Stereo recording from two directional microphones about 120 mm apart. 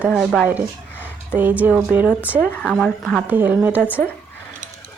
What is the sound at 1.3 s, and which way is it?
Speech, 15° right (ahead or behind).